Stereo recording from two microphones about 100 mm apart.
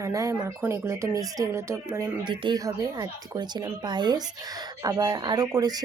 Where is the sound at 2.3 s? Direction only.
45° right (ahead or behind).